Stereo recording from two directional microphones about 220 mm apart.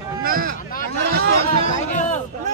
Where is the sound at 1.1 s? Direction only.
45° right (ahead or behind).